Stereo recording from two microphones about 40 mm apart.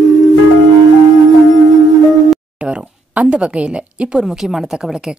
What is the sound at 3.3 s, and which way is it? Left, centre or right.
Speech, right.